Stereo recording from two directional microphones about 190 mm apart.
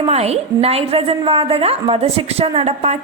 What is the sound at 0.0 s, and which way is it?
A woman's voice, 35° right (ahead or behind).